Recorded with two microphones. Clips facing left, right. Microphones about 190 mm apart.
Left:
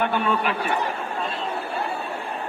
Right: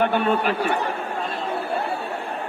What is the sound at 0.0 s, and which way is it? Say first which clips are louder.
Speech: right 3 dB; 50° right (ahead or behind).